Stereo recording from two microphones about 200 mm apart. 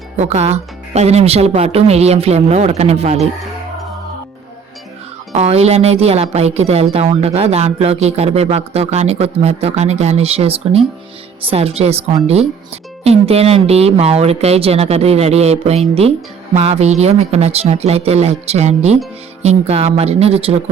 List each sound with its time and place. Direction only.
0.2 s speech: 30° right (ahead or behind)
5.3 s speech: 30° right (ahead or behind)